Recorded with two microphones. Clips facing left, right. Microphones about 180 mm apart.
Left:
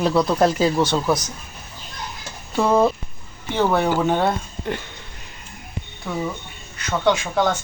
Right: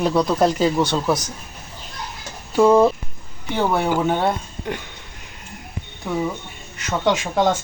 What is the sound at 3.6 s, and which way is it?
Speech, 10° right (ahead or behind).